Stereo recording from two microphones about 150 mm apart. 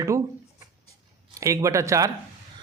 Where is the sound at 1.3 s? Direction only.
20° right (ahead or behind).